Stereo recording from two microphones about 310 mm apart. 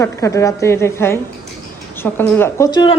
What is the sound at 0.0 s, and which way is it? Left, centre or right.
A man's voice, centre.